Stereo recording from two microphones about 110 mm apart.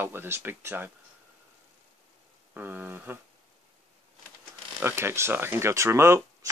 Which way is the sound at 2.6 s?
15° right (ahead or behind).